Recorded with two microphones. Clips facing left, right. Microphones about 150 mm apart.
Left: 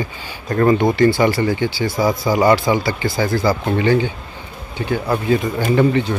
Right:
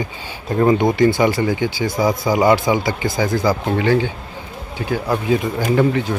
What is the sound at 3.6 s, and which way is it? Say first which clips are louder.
Speech: left 1 dB; centre (ahead or behind).